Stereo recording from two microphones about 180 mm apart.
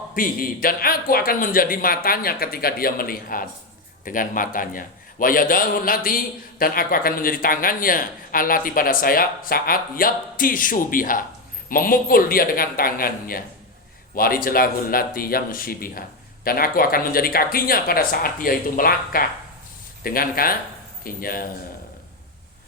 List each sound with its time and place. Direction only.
0.1 s speech: 50° left (ahead or behind)